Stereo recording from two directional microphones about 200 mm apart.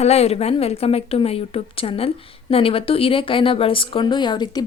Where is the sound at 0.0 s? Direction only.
30° left (ahead or behind).